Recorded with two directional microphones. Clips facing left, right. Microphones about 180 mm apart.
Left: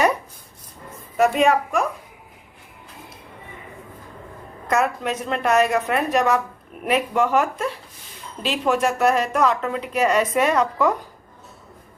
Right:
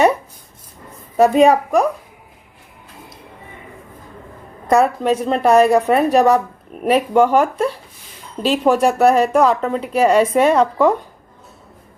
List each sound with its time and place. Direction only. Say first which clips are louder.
1.1 s speech: right 6 dB; 35° right (ahead or behind)
4.7 s speech: right 7 dB; 35° right (ahead or behind)